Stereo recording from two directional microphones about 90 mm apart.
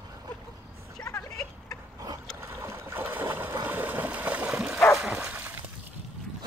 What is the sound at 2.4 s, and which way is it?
Boat, 30° right (ahead or behind).